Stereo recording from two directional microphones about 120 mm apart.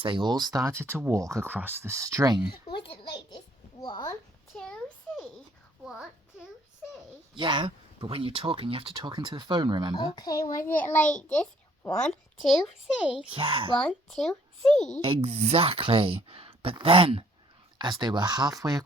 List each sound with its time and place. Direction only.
0.0 s speech: 40° right (ahead or behind)
2.5 s a sound: 45° left (ahead or behind)
4.5 s a sound: 5° left (ahead or behind)
5.8 s a child's voice: 5° right (ahead or behind)
7.3 s speech: 40° right (ahead or behind)
9.9 s a child's voice: 35° left (ahead or behind)
10.6 s a child's voice: 15° left (ahead or behind)
13.3 s speech: 45° right (ahead or behind)
13.7 s a child's voice: 5° left (ahead or behind)
15.0 s speech: 55° right (ahead or behind); by 18.9 s 30° right (ahead or behind)